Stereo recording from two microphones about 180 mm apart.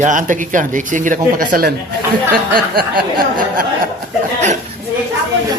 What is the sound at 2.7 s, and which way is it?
Speech, 55° right (ahead or behind).